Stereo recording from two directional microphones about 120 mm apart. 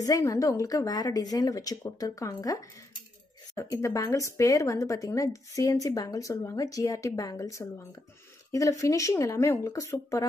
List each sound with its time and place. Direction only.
0.0 s speech: 30° left (ahead or behind)